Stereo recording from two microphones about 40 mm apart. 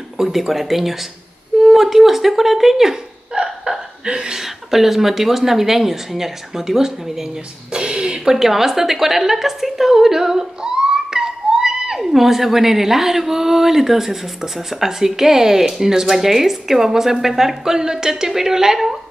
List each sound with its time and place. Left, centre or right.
0.2 s speech: centre
3.4 s hiccup: centre
4.0 s a woman's voice: centre
7.7 s a sound: right
8.4 s a woman's voice: centre